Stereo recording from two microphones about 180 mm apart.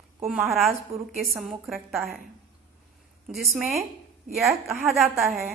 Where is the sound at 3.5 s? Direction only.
15° right (ahead or behind).